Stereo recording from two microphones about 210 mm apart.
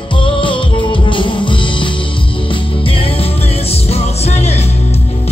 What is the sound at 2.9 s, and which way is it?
Music, 25° left (ahead or behind).